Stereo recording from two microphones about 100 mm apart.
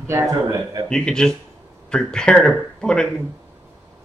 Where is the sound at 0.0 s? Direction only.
30° right (ahead or behind).